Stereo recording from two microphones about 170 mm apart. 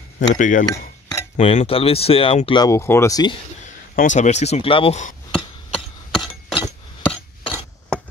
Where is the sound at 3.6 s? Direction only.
45° left (ahead or behind).